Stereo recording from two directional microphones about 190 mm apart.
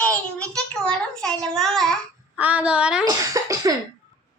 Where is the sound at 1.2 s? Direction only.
5° left (ahead or behind).